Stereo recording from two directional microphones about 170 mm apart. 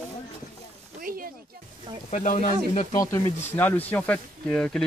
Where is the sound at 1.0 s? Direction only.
55° right (ahead or behind).